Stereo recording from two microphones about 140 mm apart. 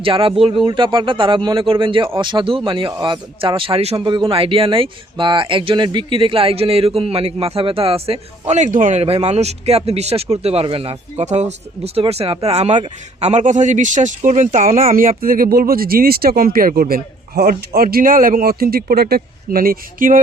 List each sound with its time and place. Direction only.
0.0 s a man's voice: 40° right (ahead or behind); by 20.1 s 85° right